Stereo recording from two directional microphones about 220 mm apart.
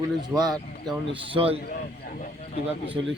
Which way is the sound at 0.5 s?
Centre (ahead or behind).